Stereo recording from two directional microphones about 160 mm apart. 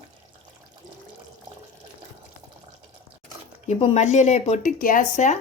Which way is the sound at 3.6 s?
45° left (ahead or behind).